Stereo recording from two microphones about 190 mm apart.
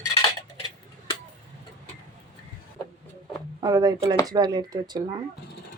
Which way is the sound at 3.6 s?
20° right (ahead or behind).